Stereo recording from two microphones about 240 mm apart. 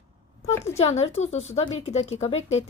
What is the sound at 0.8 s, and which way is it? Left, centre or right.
A woman's voice, left.